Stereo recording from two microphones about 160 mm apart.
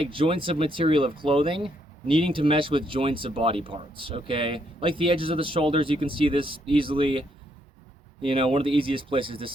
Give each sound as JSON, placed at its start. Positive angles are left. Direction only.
{"t": 0.0, "sound": "speech", "side_deg": -35}